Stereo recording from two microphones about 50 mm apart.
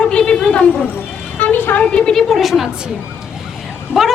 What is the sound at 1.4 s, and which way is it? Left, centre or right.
Vehicle, left.